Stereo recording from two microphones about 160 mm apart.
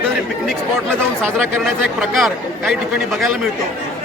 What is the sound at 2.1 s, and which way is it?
Speech, centre (ahead or behind).